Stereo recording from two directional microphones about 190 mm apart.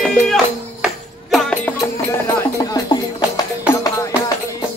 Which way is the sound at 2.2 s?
20° left (ahead or behind).